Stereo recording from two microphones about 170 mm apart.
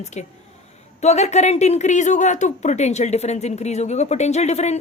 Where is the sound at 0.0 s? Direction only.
40° left (ahead or behind).